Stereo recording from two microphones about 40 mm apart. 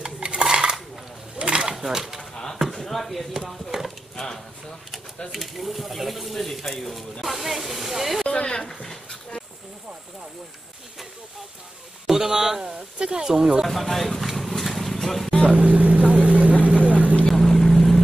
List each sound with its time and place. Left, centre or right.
0.0 s dishes: right
1.4 s a sound: right
1.8 s speech: centre
2.7 s speech: centre
5.3 s speech: centre
8.3 s speech: left
12.1 s speech: centre
12.7 s speech: right
13.7 s speech: centre
14.6 s vehicle: centre
15.5 s speech: right
16.6 s vehicle: right
17.3 s vehicle: centre